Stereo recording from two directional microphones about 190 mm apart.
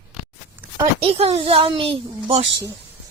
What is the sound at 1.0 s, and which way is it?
Speech, 30° right (ahead or behind).